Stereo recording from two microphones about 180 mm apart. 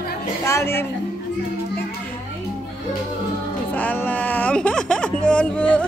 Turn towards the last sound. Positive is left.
turn(degrees=5)  # may be behind; listen again after turning